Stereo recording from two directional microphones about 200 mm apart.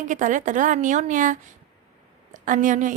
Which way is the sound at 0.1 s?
40° right (ahead or behind).